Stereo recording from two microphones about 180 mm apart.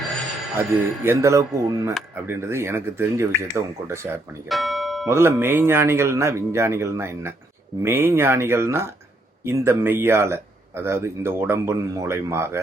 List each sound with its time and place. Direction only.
0.7 s speech: 15° right (ahead or behind)
4.4 s music: centre (ahead or behind)
5.0 s speech: 15° right (ahead or behind)